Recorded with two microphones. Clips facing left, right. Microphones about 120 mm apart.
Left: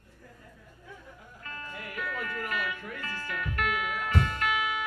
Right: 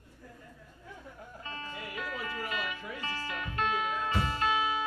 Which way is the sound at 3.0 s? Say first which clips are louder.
Left 1 dB; 25° right (ahead or behind).